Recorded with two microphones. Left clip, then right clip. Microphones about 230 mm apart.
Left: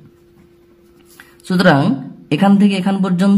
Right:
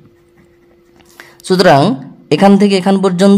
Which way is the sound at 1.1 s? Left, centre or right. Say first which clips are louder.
Right 8 dB; right.